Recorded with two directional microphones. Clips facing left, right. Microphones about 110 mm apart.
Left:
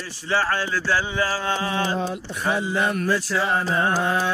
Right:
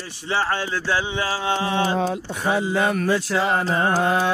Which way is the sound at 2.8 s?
65° right (ahead or behind).